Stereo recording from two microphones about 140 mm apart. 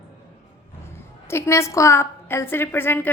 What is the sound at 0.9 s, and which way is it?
A woman's voice, 20° left (ahead or behind).